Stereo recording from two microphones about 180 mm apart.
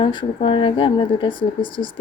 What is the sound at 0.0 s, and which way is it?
Speech, 25° left (ahead or behind).